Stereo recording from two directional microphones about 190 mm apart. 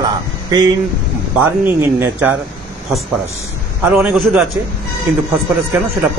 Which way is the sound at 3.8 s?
5° right (ahead or behind).